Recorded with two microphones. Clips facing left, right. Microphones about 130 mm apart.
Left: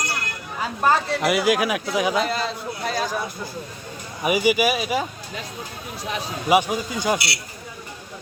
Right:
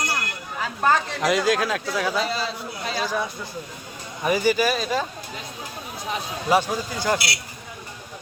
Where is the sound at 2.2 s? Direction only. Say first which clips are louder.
Left 2 dB; 50° left (ahead or behind).